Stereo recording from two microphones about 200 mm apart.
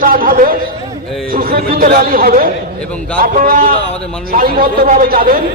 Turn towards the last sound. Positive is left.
turn(degrees=-50)  # may be behind; listen again after turning